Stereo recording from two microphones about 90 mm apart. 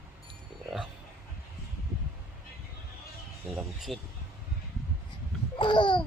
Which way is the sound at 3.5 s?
Centre (ahead or behind).